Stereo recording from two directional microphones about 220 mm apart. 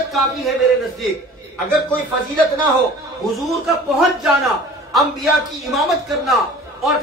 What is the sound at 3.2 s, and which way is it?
A woman's voice, centre (ahead or behind).